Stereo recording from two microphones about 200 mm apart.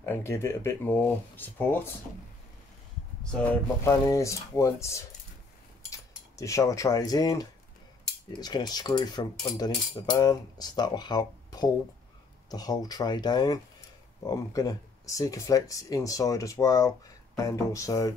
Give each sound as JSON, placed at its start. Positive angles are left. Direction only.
{"t": 0.0, "sound": "speech", "side_deg": 10}
{"t": 3.3, "sound": "speech", "side_deg": 5}